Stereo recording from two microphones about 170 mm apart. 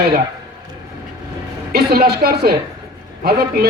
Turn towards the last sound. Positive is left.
turn(degrees=-65)  # may be behind; listen again after turning